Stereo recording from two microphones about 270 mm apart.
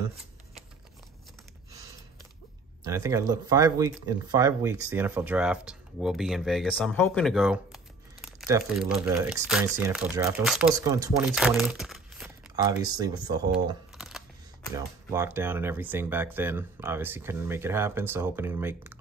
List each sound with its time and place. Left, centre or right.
2.8 s speech: centre
10.7 s speech: centre
12.5 s speech: centre
13.9 s camera: centre
14.8 s speech: centre